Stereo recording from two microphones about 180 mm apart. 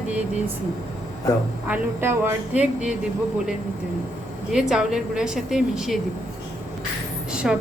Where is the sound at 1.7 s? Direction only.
10° right (ahead or behind).